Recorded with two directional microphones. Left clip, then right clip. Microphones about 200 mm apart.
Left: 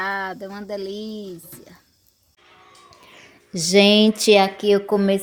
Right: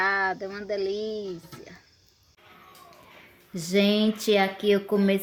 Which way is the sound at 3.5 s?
30° left (ahead or behind).